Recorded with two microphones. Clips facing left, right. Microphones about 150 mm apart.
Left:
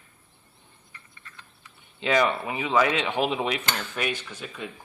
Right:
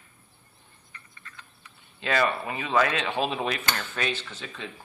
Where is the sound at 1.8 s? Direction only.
20° left (ahead or behind).